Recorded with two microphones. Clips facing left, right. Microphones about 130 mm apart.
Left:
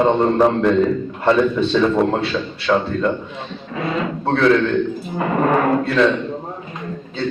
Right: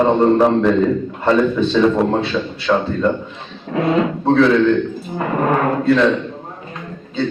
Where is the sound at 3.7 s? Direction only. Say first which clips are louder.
Right 6 dB; 60° right (ahead or behind).